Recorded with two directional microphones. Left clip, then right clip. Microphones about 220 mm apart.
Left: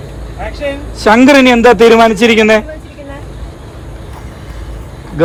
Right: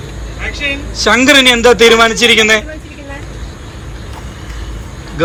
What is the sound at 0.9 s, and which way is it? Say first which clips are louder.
A man's voice: left 2 dB; 35° left (ahead or behind).